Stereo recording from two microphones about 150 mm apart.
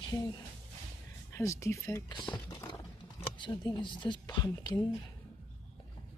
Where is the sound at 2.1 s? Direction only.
30° left (ahead or behind).